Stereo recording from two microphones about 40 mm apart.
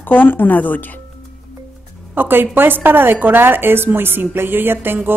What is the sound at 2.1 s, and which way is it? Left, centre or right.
A woman's voice, right.